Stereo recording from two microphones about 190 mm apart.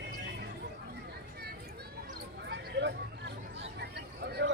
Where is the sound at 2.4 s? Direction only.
65° right (ahead or behind).